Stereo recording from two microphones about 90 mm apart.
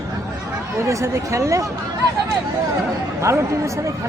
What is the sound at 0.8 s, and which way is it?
Speech, 35° right (ahead or behind).